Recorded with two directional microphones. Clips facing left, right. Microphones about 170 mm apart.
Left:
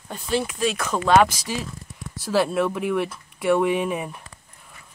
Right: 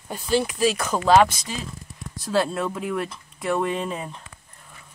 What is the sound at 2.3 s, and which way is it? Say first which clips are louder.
Speech: left 2 dB; centre (ahead or behind).